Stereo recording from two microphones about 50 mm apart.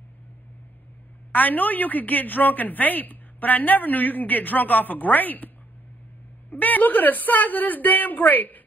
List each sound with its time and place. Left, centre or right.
1.3 s a woman's voice: left
6.5 s a woman's voice: left